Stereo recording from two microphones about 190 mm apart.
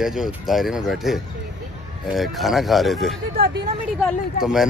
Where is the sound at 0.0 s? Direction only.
5° right (ahead or behind).